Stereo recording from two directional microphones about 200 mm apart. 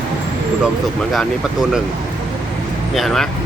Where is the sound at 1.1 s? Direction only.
5° right (ahead or behind).